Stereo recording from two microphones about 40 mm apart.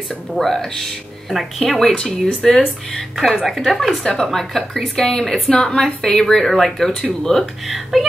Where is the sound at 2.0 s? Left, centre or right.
Centre.